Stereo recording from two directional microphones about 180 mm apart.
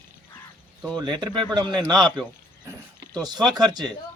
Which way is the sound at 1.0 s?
25° right (ahead or behind).